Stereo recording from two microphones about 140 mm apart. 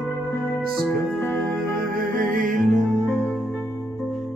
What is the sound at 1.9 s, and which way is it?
Music, 85° right.